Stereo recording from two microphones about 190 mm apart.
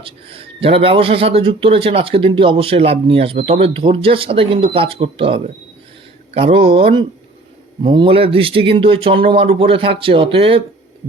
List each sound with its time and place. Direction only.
0.0 s a man's voice: 30° right (ahead or behind)